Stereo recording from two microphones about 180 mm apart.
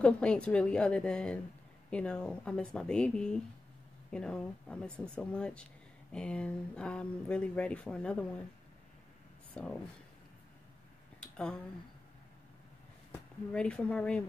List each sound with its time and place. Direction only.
0.0 s speech: 5° left (ahead or behind)
9.5 s speech: 5° left (ahead or behind)
13.1 s speech: 5° left (ahead or behind)